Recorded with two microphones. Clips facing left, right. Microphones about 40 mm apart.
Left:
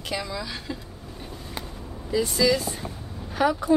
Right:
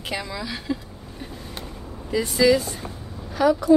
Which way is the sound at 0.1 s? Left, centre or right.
Centre.